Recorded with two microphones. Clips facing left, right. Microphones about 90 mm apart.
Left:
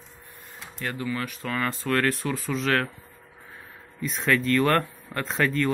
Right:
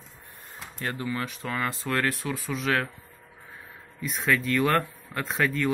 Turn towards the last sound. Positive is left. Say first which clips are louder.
# left 2 dB
turn(degrees=-10)  # may be behind; listen again after turning